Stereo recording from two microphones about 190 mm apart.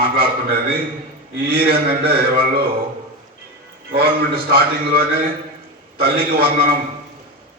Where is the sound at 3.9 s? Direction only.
55° right (ahead or behind).